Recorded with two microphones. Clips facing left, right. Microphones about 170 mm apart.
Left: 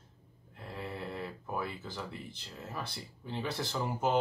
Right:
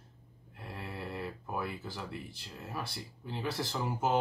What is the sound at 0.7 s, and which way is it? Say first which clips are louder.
Speech: left 1 dB; 5° right (ahead or behind).